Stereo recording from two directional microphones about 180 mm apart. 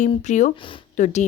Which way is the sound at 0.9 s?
45° left (ahead or behind).